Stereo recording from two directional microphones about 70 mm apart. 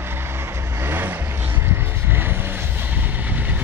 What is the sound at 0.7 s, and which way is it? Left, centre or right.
Vehicle, right.